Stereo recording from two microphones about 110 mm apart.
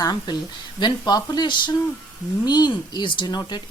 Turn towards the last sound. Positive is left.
turn(degrees=40)  # may be behind; listen again after turning